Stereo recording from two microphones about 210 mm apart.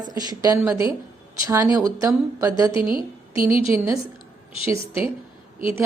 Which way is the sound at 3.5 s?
25° left (ahead or behind).